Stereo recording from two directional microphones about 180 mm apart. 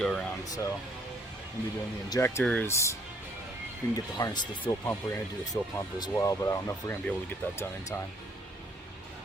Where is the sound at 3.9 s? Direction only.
20° left (ahead or behind).